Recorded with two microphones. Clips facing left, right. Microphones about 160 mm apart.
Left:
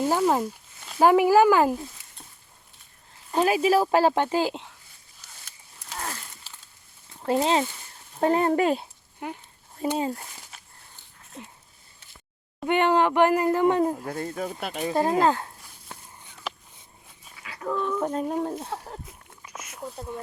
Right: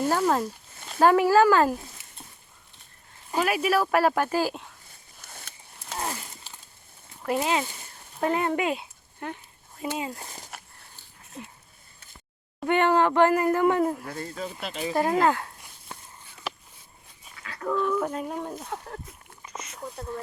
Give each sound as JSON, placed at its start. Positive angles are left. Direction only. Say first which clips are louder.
{"t": 0.1, "sound": "speech", "louder": "left 1 dB", "side_deg": 15}
{"t": 3.4, "sound": "speech", "louder": "left 4 dB", "side_deg": 25}
{"t": 5.2, "sound": "a sound", "louder": "right 5 dB", "side_deg": -55}
{"t": 6.0, "sound": "a sound", "louder": "right 3 dB", "side_deg": -15}
{"t": 7.2, "sound": "speech", "louder": "left 3 dB", "side_deg": 30}
{"t": 9.2, "sound": "speech", "louder": "left 1 dB", "side_deg": 15}
{"t": 9.8, "sound": "speech", "louder": "left 5 dB", "side_deg": 35}
{"t": 12.6, "sound": "speech", "louder": "even", "side_deg": 20}
{"t": 14.1, "sound": "speech", "louder": "left 4 dB", "side_deg": 45}
{"t": 15.2, "sound": "speech", "louder": "left 1 dB", "side_deg": 25}
{"t": 17.3, "sound": "dog", "louder": "right 1 dB", "side_deg": 10}
{"t": 17.8, "sound": "speech", "louder": "even", "side_deg": 20}
{"t": 18.1, "sound": "speech", "louder": "left 5 dB", "side_deg": 35}
{"t": 19.5, "sound": "a sound", "louder": "even", "side_deg": 5}